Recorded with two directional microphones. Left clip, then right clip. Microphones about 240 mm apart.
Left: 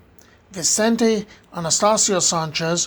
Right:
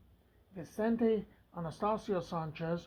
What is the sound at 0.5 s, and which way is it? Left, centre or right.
Speech, left.